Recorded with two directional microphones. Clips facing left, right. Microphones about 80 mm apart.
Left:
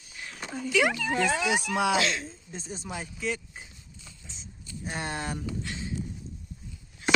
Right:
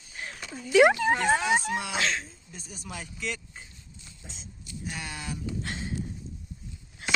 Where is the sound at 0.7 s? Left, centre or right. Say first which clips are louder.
Right 7 dB; right.